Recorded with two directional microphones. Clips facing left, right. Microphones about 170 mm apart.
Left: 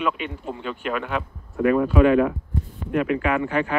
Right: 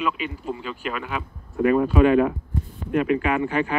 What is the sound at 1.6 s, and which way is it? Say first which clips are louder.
Speech: even; 25° right (ahead or behind).